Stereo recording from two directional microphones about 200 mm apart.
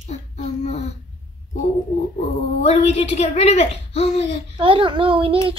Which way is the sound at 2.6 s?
30° left (ahead or behind).